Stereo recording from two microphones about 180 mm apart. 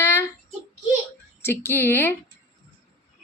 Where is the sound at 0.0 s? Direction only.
15° left (ahead or behind).